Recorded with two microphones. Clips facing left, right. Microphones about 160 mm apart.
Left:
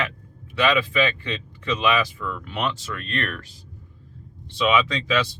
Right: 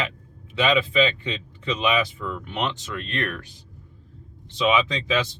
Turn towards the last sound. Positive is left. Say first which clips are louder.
# left 1 dB
turn(degrees=-20)  # may be behind; listen again after turning